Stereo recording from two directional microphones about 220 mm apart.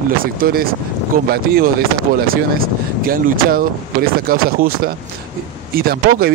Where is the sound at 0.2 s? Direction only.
40° right (ahead or behind).